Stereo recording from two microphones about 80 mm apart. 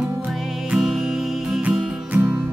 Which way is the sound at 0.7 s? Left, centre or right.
Centre.